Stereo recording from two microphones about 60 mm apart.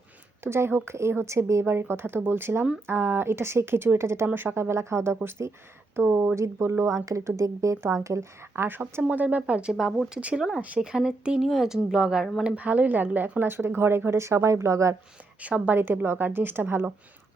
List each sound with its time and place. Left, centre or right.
0.4 s speech: right
4.4 s a woman's voice: right
6.3 s speech: right
8.5 s a woman's voice: right
9.0 s a woman's voice: right
13.5 s speech: right
15.4 s speech: right
15.8 s a woman's voice: right